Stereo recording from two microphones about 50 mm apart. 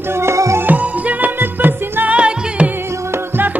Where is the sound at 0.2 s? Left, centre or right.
Right.